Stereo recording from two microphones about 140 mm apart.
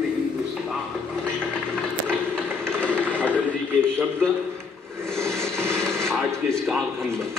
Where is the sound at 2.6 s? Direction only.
5° left (ahead or behind).